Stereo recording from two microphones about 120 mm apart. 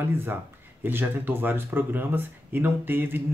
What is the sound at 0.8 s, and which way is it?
Speech, 20° right (ahead or behind).